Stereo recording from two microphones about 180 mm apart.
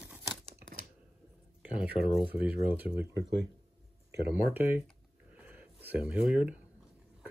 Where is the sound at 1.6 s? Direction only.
5° right (ahead or behind).